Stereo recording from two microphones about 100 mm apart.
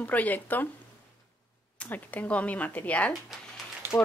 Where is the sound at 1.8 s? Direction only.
15° left (ahead or behind).